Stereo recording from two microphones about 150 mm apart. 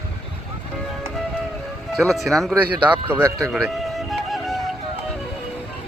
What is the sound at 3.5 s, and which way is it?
Music, centre (ahead or behind).